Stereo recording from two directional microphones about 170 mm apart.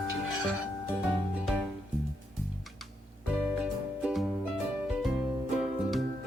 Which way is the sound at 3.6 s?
5° right (ahead or behind).